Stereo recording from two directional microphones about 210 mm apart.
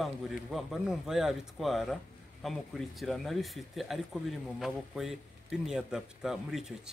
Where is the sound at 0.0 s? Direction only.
Centre (ahead or behind).